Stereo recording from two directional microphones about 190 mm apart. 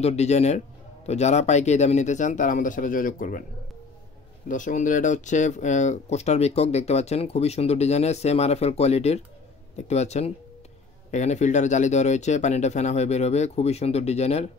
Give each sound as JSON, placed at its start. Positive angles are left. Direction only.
{"t": 0.0, "sound": "speech", "side_deg": 35}
{"t": 4.5, "sound": "speech", "side_deg": 40}